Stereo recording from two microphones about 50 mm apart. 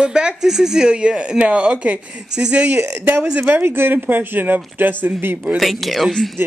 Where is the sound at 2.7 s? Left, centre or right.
Right.